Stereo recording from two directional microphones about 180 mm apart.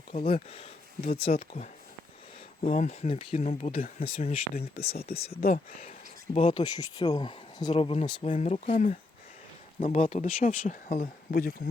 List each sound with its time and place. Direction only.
0.1 s speech: 40° left (ahead or behind)
5.3 s speech: 55° left (ahead or behind)
6.3 s speech: 25° left (ahead or behind); by 11.7 s 55° left (ahead or behind)